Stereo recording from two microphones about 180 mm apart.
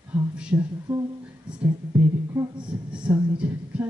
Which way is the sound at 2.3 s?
20° right (ahead or behind).